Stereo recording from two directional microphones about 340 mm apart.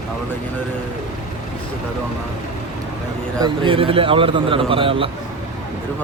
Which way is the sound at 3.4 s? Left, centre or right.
Centre.